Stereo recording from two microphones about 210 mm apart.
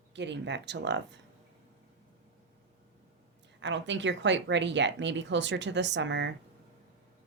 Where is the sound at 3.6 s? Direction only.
60° right (ahead or behind).